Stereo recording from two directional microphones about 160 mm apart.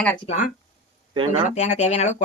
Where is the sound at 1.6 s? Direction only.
45° left (ahead or behind).